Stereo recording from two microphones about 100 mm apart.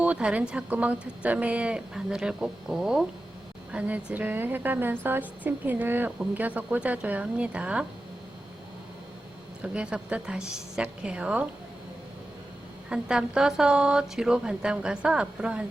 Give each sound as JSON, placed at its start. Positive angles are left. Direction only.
{"t": 0.0, "sound": "a woman's voice", "side_deg": -10}
{"t": 9.6, "sound": "a woman's voice", "side_deg": -10}
{"t": 12.9, "sound": "a woman's voice", "side_deg": -5}